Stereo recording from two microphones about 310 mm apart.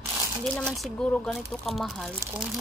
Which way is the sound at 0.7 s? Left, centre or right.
Centre.